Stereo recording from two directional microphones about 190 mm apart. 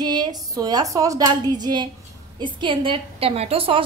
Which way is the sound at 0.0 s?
20° right (ahead or behind).